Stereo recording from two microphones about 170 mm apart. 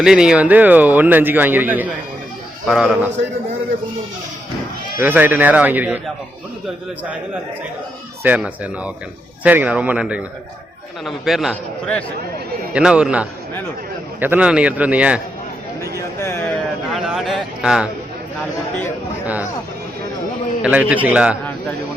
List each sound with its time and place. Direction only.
0.0 s a man's voice: 5° right (ahead or behind)
4.9 s a man's voice: 10° right (ahead or behind)
8.2 s a man's voice: 10° right (ahead or behind)
15.8 s speech: 15° left (ahead or behind)
16.9 s a man's voice: centre (ahead or behind)
20.6 s a man's voice: 10° right (ahead or behind)